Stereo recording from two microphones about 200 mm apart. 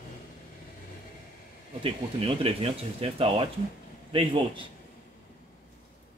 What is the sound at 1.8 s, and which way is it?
Speech, 30° right (ahead or behind).